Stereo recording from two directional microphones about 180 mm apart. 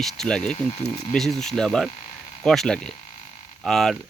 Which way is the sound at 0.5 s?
35° left (ahead or behind).